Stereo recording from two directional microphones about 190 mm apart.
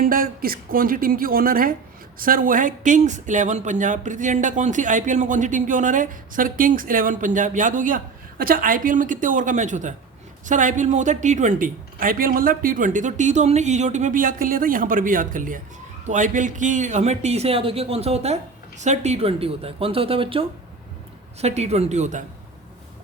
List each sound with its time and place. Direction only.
0.0 s speech: 50° right (ahead or behind)